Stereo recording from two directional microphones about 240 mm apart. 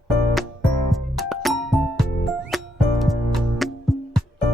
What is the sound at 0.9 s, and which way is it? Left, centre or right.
Music, centre.